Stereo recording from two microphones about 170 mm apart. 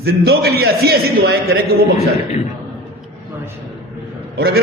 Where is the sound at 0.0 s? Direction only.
70° right (ahead or behind).